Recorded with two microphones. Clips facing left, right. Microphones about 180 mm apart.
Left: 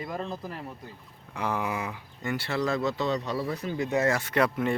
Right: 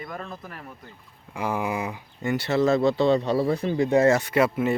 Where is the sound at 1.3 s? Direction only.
10° right (ahead or behind); by 4.2 s 25° right (ahead or behind).